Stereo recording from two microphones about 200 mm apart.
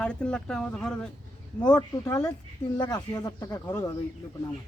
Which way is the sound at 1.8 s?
15° left (ahead or behind).